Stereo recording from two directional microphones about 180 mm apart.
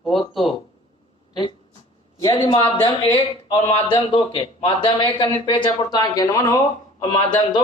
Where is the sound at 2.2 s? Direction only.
20° left (ahead or behind).